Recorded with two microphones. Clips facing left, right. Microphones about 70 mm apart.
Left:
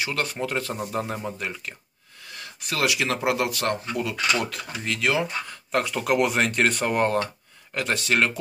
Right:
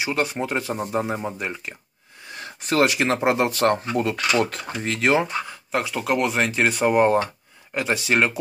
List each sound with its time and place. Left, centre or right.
0.0 s speech: centre
5.5 s speech: centre